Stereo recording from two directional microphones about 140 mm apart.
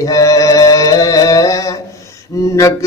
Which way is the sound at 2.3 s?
25° left (ahead or behind).